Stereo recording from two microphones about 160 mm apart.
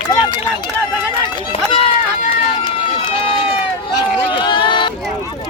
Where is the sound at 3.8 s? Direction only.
30° left (ahead or behind).